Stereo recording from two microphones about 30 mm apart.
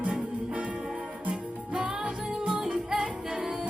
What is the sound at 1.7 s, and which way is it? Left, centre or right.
Music, right.